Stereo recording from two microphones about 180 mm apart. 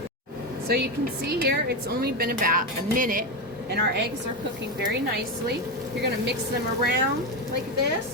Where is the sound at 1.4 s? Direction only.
60° right (ahead or behind).